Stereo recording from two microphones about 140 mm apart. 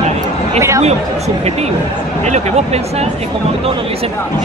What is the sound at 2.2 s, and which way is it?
Speech, 50° right (ahead or behind).